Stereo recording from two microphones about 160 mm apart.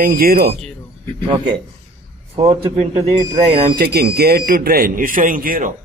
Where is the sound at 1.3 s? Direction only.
30° right (ahead or behind).